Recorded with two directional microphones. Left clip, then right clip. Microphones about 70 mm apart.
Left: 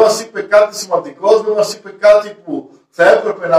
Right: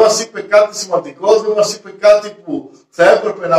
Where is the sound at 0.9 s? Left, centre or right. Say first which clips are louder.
Even; left.